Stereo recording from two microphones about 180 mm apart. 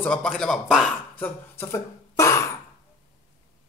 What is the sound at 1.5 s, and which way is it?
Throat clearing, 15° left (ahead or behind).